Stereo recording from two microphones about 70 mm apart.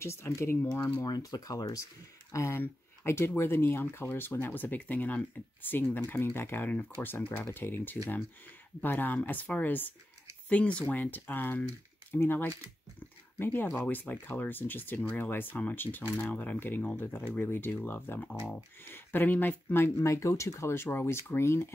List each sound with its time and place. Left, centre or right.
0.0 s speech: left
1.0 s speech: left
2.3 s speech: left
2.6 s speech: left